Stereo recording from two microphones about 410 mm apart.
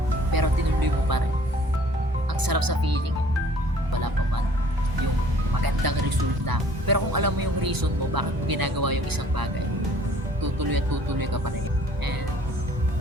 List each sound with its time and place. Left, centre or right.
0.3 s music: right
2.4 s music: right
5.8 s music: right
6.4 s speech: right
10.4 s speech: right